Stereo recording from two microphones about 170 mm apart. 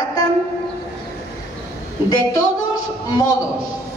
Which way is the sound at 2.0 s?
20° left (ahead or behind).